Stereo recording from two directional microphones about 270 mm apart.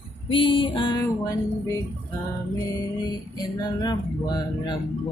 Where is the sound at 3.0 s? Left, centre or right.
Centre.